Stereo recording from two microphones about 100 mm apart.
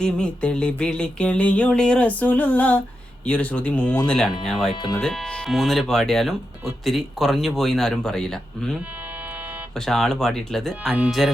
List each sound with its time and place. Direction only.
0.0 s a sound: 10° left (ahead or behind)
4.4 s speech: 5° left (ahead or behind)
4.7 s speech: 50° left (ahead or behind)
4.9 s speech: 5° left (ahead or behind)
9.3 s a sound: 15° right (ahead or behind)
9.7 s speech: 5° left (ahead or behind)